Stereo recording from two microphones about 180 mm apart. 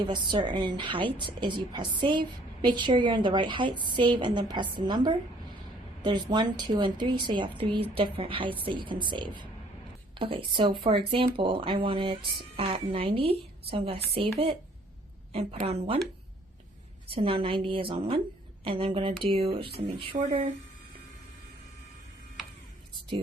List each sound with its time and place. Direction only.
0.0 s a woman's voice: 25° right (ahead or behind)
17.1 s a woman's voice: 30° right (ahead or behind)